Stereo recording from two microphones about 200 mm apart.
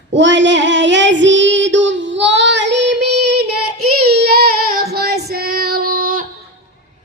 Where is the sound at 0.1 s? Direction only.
65° right (ahead or behind); by 6.2 s 45° right (ahead or behind).